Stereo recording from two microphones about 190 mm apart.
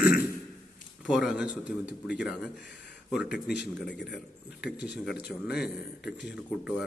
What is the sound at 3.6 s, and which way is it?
Speech, 65° left (ahead or behind).